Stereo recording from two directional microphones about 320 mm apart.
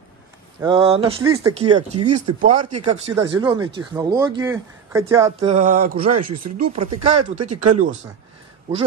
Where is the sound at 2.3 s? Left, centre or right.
Right.